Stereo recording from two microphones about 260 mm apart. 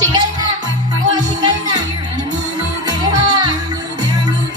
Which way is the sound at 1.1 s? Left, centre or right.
Centre.